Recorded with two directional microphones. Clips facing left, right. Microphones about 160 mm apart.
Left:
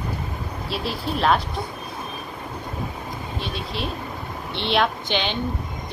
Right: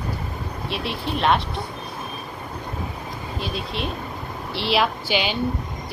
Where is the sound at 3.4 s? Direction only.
Centre (ahead or behind).